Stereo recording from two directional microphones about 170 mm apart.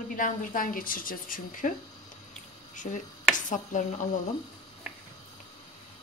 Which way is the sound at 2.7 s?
50° left (ahead or behind).